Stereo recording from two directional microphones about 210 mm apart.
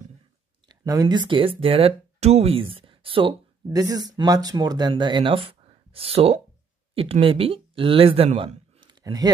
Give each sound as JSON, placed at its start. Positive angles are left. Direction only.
{"t": 0.7, "sound": "speech", "side_deg": -20}